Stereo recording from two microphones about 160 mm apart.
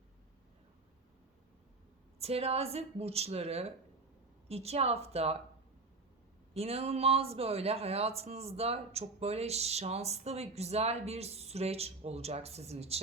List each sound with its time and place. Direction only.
2.1 s speech: 40° right (ahead or behind)
6.5 s speech: 40° right (ahead or behind)